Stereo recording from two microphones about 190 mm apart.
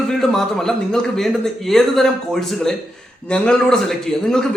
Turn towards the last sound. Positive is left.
turn(degrees=5)  # may be behind; listen again after turning